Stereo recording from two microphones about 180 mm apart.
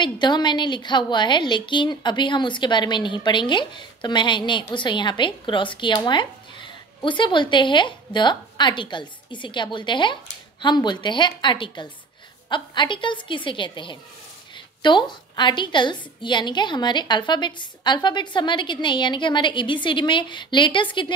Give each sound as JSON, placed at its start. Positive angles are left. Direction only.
{"t": 0.0, "sound": "a woman's voice", "side_deg": 25}